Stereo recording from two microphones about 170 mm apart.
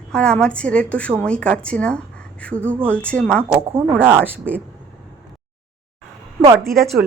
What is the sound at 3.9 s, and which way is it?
Speech, 10° right (ahead or behind).